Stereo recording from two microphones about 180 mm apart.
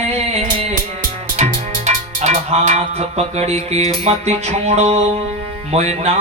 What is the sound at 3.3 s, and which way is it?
Mantra, 35° right (ahead or behind).